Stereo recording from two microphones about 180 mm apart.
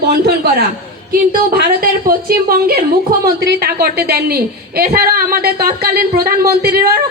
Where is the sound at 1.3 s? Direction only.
55° right (ahead or behind).